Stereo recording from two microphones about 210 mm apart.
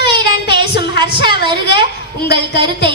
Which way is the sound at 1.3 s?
20° right (ahead or behind).